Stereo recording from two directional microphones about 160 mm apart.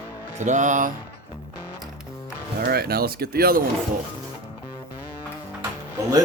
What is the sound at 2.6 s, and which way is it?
Speech, 75° right (ahead or behind).